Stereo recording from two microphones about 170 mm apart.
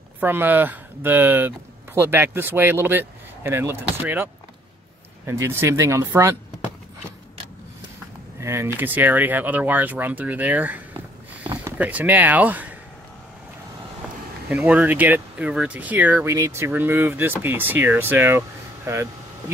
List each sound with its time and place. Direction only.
0.2 s speech: 10° right (ahead or behind)
8.4 s speech: 15° right (ahead or behind)
14.5 s speech: 10° right (ahead or behind)